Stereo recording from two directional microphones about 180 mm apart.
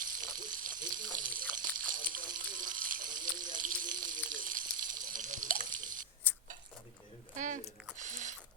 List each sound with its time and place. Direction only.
0.0 s water: 50° right (ahead or behind)
6.3 s tick-tock: 10° left (ahead or behind)
7.3 s chewing: 45° right (ahead or behind)
7.9 s a sound: 45° right (ahead or behind)